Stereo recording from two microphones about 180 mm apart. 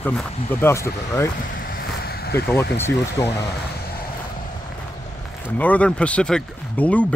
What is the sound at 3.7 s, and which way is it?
Vehicle, 60° left (ahead or behind).